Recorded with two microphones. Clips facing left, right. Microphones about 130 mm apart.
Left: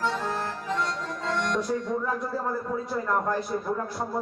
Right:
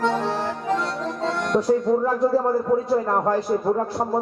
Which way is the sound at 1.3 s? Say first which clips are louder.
Right 7 dB; 50° right (ahead or behind).